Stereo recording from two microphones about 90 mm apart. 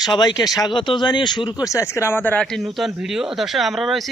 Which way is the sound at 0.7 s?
65° left (ahead or behind).